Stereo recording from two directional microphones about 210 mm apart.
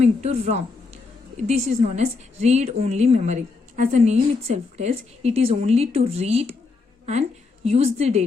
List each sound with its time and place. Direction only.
0.0 s a woman's voice: 30° right (ahead or behind)